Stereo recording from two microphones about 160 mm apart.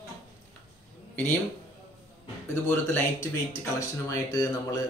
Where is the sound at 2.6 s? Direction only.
15° left (ahead or behind).